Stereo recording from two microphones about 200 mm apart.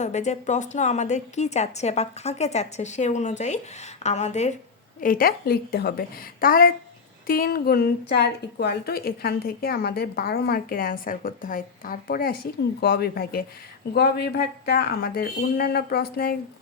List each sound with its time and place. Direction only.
0.0 s a woman's voice: 35° left (ahead or behind); by 16.4 s 50° left (ahead or behind)